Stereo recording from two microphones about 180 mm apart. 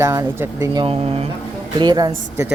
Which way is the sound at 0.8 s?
35° right (ahead or behind).